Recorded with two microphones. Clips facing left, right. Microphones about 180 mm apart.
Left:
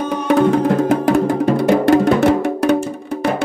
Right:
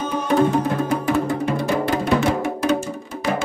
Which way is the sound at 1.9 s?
75° left (ahead or behind).